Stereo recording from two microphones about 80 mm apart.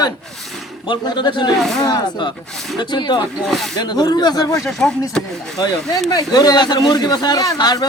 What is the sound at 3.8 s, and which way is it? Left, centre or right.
Speech, left.